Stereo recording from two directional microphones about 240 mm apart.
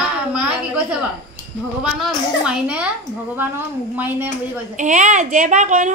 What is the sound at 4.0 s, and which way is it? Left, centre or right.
Speech, centre.